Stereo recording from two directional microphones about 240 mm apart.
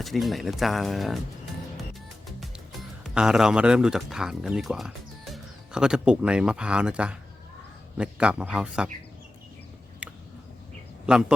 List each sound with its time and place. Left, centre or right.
0.0 s speech: centre
1.7 s music: centre
3.0 s a man's voice: centre
10.0 s a sound: centre
11.0 s speech: centre